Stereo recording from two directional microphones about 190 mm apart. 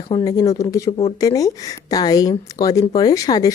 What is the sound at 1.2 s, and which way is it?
A woman's voice, 20° left (ahead or behind).